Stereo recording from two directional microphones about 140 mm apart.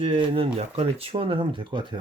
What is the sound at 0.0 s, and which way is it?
Speech, 40° right (ahead or behind).